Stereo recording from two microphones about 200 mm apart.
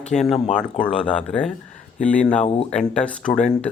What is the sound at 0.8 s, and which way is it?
Speech, 5° left (ahead or behind).